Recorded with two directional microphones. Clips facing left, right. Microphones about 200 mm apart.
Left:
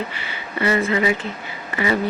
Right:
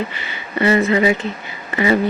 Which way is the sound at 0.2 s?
25° right (ahead or behind).